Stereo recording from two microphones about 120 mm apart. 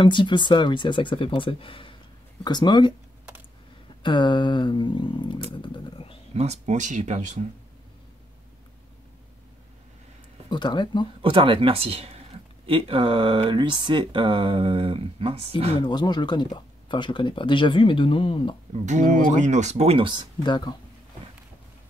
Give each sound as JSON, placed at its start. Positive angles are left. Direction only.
{"t": 0.0, "sound": "speech", "side_deg": 40}
{"t": 4.0, "sound": "speech", "side_deg": 40}
{"t": 5.6, "sound": "vehicle", "side_deg": 45}
{"t": 6.3, "sound": "speech", "side_deg": -65}
{"t": 10.5, "sound": "speech", "side_deg": 40}
{"t": 11.2, "sound": "speech", "side_deg": -45}
{"t": 15.8, "sound": "speech", "side_deg": 35}
{"t": 18.9, "sound": "speech", "side_deg": -90}
{"t": 20.4, "sound": "speech", "side_deg": 40}